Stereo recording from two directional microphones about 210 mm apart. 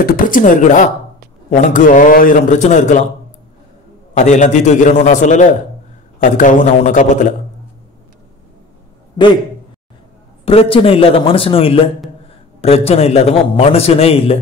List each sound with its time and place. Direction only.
0.0 s a man's voice: 40° left (ahead or behind)
4.2 s a man's voice: 35° left (ahead or behind)
10.4 s a man's voice: 25° left (ahead or behind)